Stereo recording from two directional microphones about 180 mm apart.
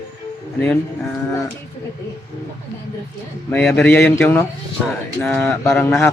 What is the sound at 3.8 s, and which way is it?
Speech, 10° left (ahead or behind).